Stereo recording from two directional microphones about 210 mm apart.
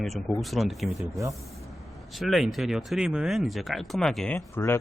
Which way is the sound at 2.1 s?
Centre (ahead or behind).